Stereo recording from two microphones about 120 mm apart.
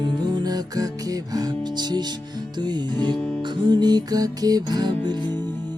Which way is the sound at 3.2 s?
10° left (ahead or behind).